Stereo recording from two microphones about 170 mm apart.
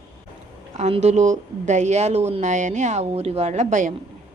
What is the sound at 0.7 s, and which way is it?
Speech, 40° right (ahead or behind).